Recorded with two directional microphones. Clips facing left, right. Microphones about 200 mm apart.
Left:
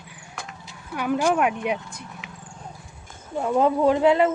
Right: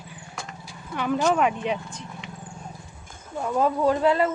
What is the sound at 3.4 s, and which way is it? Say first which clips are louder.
Speech: left 3 dB; 20° left (ahead or behind).